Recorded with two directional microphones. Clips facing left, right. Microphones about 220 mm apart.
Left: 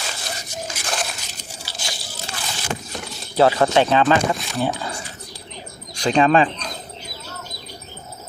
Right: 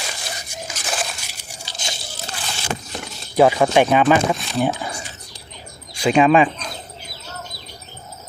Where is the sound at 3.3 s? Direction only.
15° right (ahead or behind).